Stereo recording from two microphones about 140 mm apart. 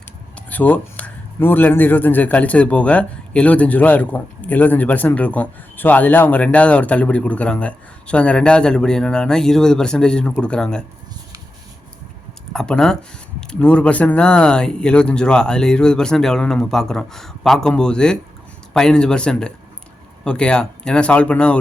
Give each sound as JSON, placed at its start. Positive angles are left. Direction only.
{"t": 0.3, "sound": "speech", "side_deg": 10}
{"t": 12.5, "sound": "speech", "side_deg": 5}